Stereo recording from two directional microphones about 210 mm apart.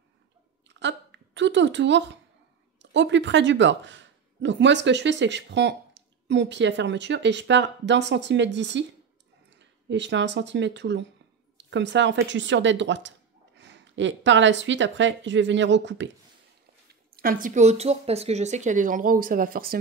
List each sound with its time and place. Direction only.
0.7 s a sound: 60° right (ahead or behind)
2.8 s speech: 60° right (ahead or behind)
17.1 s a woman's voice: 45° right (ahead or behind)